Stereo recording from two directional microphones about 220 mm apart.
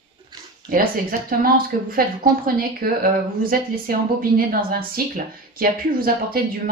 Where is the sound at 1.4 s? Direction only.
40° right (ahead or behind).